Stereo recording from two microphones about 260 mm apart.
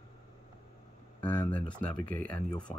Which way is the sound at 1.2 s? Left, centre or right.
Centre.